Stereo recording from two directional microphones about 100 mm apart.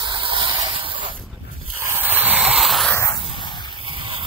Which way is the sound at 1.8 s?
20° right (ahead or behind).